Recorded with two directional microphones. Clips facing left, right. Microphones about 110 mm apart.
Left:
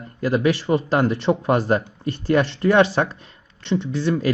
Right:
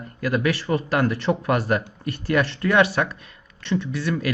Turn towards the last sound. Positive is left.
turn(degrees=30)  # may be behind; listen again after turning